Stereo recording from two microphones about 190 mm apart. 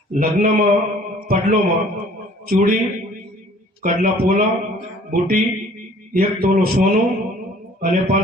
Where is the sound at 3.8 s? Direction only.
45° right (ahead or behind).